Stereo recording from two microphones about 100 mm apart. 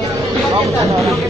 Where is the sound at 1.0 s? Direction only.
Centre (ahead or behind).